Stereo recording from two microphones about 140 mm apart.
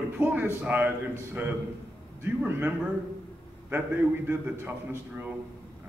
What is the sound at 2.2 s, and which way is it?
Speech, 15° right (ahead or behind).